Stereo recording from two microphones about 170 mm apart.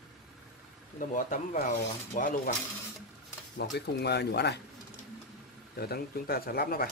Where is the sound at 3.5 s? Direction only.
75° left (ahead or behind).